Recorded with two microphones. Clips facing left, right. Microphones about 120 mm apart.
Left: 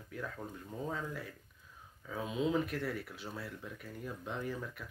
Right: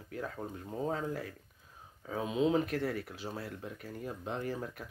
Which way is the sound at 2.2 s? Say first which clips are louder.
Right 4 dB; 30° right (ahead or behind).